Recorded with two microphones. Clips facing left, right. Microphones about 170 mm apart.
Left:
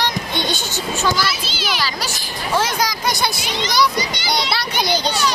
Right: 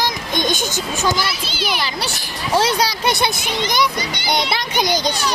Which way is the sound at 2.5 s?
30° right (ahead or behind).